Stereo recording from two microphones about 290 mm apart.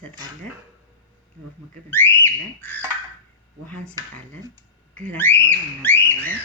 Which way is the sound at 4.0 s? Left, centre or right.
Centre.